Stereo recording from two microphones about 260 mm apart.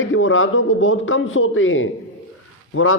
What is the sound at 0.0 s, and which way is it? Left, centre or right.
A man's voice, left.